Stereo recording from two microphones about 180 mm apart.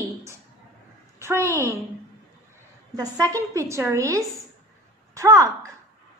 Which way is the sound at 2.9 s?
20° right (ahead or behind).